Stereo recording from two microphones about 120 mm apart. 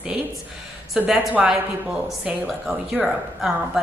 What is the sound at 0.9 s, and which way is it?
A woman's voice, 10° right (ahead or behind).